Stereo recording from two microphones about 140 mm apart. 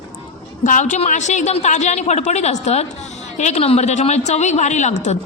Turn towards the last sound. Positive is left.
turn(degrees=55)  # may be behind; listen again after turning